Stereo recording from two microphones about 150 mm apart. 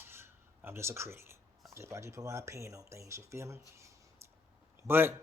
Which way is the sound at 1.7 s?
20° right (ahead or behind).